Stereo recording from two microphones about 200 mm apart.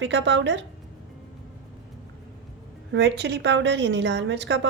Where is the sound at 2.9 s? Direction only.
60° right (ahead or behind).